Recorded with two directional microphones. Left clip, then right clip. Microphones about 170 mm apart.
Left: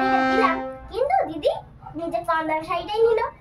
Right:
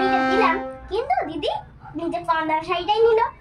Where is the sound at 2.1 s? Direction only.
25° left (ahead or behind).